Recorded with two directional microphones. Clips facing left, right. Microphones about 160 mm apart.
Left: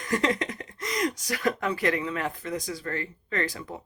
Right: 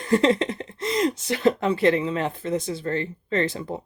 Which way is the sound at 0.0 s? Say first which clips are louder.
Right 7 dB; 30° right (ahead or behind).